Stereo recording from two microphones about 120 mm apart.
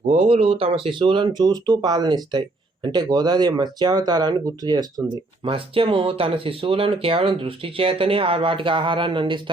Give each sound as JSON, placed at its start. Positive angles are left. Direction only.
{"t": 0.1, "sound": "speech", "side_deg": -60}
{"t": 0.5, "sound": "speech", "side_deg": -45}
{"t": 5.4, "sound": "speech", "side_deg": -50}